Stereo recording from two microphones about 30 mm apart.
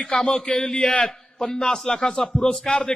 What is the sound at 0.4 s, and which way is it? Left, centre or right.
A man's voice, left.